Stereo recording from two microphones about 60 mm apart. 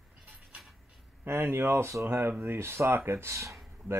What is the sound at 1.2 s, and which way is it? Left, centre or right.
Speech, right.